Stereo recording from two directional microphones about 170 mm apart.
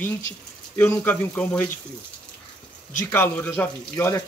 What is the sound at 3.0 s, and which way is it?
Speech, 10° left (ahead or behind).